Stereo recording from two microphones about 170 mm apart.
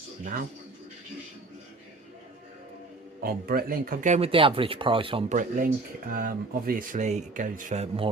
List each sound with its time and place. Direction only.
3.2 s speech: 60° right (ahead or behind); by 5.2 s 30° right (ahead or behind)
5.3 s speech: 50° right (ahead or behind); by 8.1 s 35° right (ahead or behind)